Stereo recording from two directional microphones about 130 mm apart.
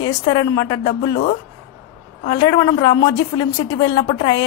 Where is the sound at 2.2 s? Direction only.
30° left (ahead or behind).